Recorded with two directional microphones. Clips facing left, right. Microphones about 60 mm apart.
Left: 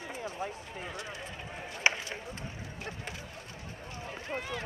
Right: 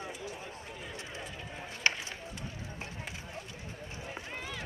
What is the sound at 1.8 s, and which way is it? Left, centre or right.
Run, centre.